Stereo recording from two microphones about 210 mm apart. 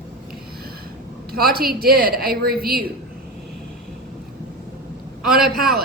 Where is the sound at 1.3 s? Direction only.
45° right (ahead or behind).